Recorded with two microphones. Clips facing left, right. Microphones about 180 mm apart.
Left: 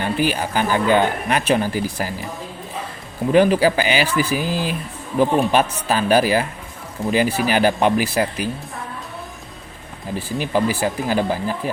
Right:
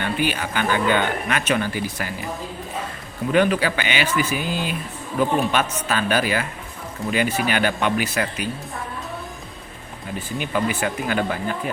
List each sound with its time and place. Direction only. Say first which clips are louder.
0.0 s speech: left 3 dB; 40° left (ahead or behind)
3.3 s speech: left 5 dB; 35° left (ahead or behind)
10.4 s speech: left 3 dB; 35° left (ahead or behind)